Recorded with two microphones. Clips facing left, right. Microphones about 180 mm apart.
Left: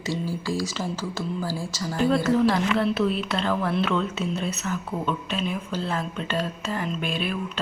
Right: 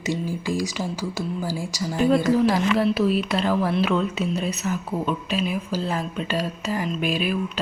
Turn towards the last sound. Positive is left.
turn(degrees=-10)  # may be behind; listen again after turning